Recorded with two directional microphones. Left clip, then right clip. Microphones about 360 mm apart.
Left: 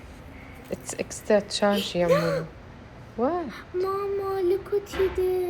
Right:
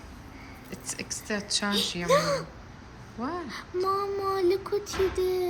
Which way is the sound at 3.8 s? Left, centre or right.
Centre.